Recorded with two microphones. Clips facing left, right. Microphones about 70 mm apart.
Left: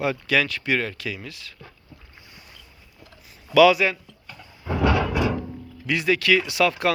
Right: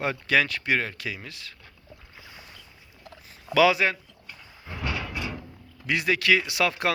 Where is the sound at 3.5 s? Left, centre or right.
Right.